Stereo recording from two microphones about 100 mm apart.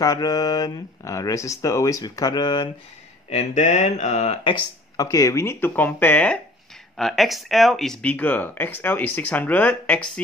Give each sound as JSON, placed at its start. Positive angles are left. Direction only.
{"t": 0.0, "sound": "speech", "side_deg": 40}
{"t": 3.9, "sound": "speech", "side_deg": 90}
{"t": 4.9, "sound": "speech", "side_deg": 35}
{"t": 7.0, "sound": "speech", "side_deg": 0}